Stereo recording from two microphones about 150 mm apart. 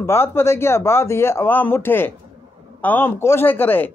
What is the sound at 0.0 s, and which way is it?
A man's voice, 15° left (ahead or behind).